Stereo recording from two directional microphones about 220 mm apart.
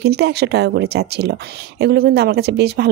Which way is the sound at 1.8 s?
50° right (ahead or behind).